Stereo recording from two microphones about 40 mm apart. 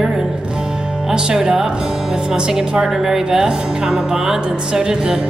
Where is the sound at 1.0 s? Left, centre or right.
Centre.